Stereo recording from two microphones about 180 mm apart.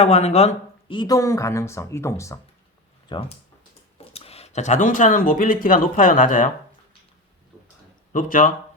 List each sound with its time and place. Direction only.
0.0 s speech: 40° left (ahead or behind); by 2.4 s 15° left (ahead or behind)
3.1 s speech: 30° left (ahead or behind)
8.1 s speech: 45° left (ahead or behind)